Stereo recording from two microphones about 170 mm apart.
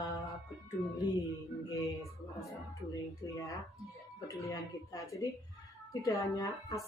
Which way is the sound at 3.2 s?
20° left (ahead or behind).